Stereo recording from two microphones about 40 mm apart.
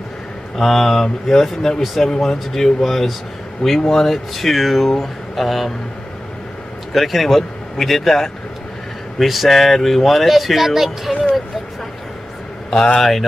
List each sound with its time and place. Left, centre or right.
0.6 s speech: centre
6.9 s a man's voice: centre
12.7 s speech: left
13.0 s speech: centre